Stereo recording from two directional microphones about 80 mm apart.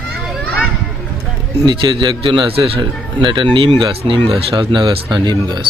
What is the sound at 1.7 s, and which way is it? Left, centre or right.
A man's voice, right.